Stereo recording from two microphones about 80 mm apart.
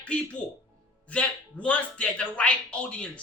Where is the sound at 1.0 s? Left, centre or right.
Centre.